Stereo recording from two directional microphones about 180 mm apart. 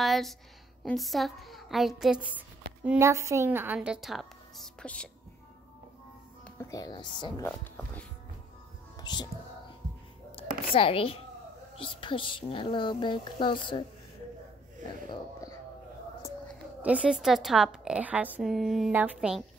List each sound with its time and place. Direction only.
0.0 s a sound: centre (ahead or behind)
0.8 s speech: centre (ahead or behind)
6.4 s speech: 15° left (ahead or behind)
7.4 s speech: 10° left (ahead or behind)
8.9 s music: 25° left (ahead or behind)
10.7 s a woman's voice: 30° left (ahead or behind)
16.8 s a woman's voice: 5° right (ahead or behind)